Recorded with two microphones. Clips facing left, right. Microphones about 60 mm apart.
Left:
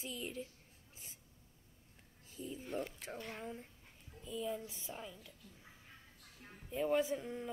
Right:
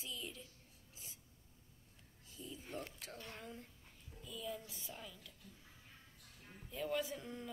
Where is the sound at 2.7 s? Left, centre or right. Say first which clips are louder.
Left 6 dB; centre.